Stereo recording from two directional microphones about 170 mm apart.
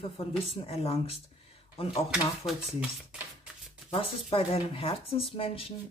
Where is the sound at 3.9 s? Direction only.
35° left (ahead or behind).